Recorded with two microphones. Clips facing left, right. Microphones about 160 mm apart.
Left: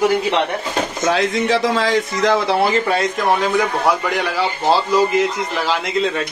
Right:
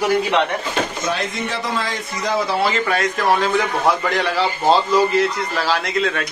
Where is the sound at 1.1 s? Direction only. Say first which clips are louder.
Left 7 dB; 90° left.